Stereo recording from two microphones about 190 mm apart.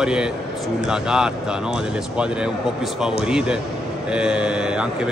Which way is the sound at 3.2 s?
5° right (ahead or behind).